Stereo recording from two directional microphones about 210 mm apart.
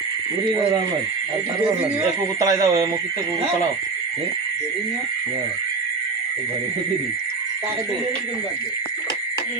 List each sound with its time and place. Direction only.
2.4 s speech: 15° right (ahead or behind)